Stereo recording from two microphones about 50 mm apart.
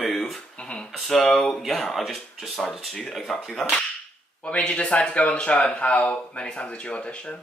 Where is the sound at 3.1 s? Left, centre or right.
Centre.